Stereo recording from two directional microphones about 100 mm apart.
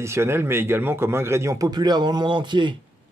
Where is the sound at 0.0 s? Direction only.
25° right (ahead or behind).